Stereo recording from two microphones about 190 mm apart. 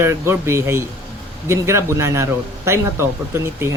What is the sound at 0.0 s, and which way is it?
Speech, 15° right (ahead or behind).